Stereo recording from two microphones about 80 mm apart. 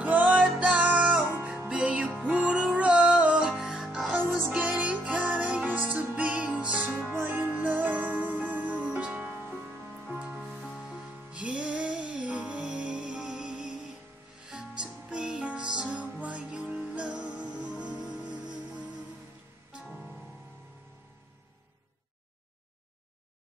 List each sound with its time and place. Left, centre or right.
0.0 s music: centre
4.5 s music: centre
19.7 s music: centre